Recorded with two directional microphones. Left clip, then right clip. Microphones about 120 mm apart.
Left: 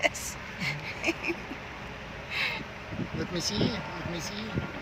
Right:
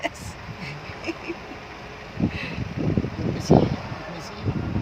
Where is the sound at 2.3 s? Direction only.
Centre (ahead or behind).